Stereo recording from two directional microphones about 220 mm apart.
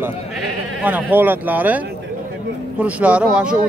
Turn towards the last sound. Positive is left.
turn(degrees=-5)  # may be behind; listen again after turning